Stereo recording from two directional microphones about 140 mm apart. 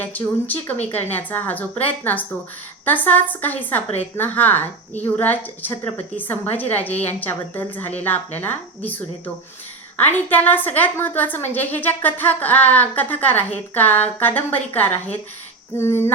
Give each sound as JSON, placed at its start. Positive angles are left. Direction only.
{"t": 0.0, "sound": "a woman's voice", "side_deg": 10}